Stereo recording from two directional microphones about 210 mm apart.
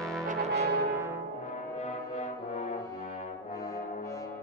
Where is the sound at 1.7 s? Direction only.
35° left (ahead or behind).